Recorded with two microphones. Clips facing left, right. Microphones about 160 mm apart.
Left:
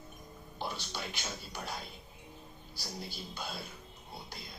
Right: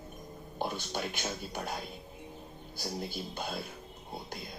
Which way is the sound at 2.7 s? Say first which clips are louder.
Right 6 dB; 50° right (ahead or behind).